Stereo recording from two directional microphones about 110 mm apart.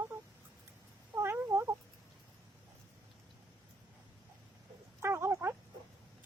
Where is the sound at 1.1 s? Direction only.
25° right (ahead or behind).